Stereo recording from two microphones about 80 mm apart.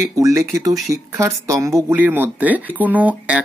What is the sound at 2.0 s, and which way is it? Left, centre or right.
Speech, right.